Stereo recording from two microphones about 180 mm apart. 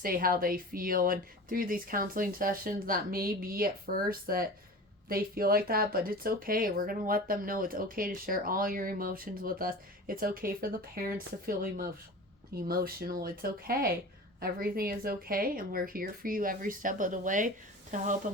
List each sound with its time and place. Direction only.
0.0 s speech: 55° right (ahead or behind)